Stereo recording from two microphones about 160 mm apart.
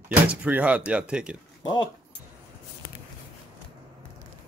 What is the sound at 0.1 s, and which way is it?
Speech, 10° right (ahead or behind).